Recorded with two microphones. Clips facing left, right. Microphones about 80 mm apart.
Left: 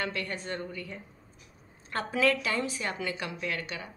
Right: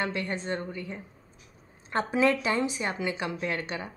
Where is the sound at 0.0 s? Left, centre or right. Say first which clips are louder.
Right 3 dB; right.